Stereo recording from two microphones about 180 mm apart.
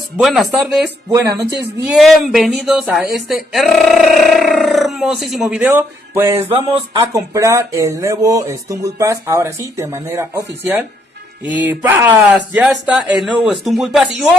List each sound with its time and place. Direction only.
0.2 s speech: centre (ahead or behind)
1.9 s speech: centre (ahead or behind)